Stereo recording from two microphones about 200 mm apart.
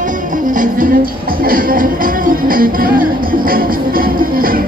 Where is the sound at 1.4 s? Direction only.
45° right (ahead or behind).